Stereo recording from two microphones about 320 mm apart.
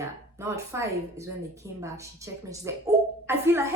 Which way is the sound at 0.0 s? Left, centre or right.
Centre.